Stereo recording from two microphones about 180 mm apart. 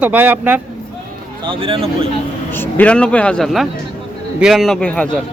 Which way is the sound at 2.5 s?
10° left (ahead or behind).